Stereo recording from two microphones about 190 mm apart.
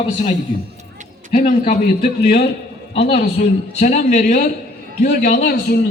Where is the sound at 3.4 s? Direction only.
40° left (ahead or behind).